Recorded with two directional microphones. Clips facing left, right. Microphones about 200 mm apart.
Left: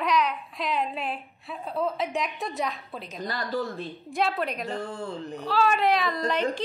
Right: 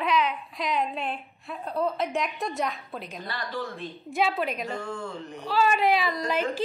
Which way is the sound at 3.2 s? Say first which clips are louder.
Left 6 dB; 40° left (ahead or behind).